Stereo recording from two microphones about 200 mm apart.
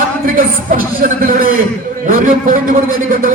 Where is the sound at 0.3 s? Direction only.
45° right (ahead or behind).